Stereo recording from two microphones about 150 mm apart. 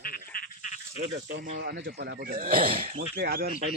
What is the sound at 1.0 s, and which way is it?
Speech, 50° right (ahead or behind).